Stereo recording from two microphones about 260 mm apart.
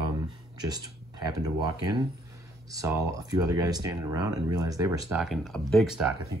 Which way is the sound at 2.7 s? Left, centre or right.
Centre.